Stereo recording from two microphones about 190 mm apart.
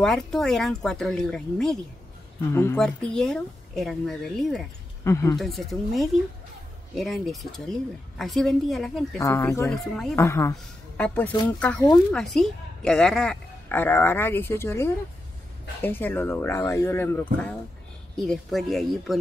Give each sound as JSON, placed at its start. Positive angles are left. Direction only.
{"t": 0.0, "sound": "speech", "side_deg": 0}
{"t": 5.0, "sound": "speech", "side_deg": 15}
{"t": 5.4, "sound": "speech", "side_deg": 0}
{"t": 9.2, "sound": "speech", "side_deg": 15}
{"t": 9.7, "sound": "speech", "side_deg": 0}
{"t": 10.1, "sound": "speech", "side_deg": 15}